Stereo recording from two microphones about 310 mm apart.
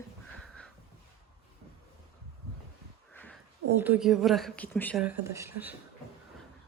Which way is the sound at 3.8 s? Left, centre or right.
Centre.